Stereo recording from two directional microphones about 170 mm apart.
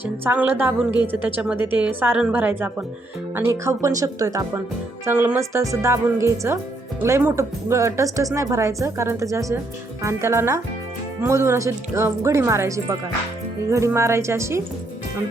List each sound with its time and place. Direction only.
0.0 s speech: 10° right (ahead or behind)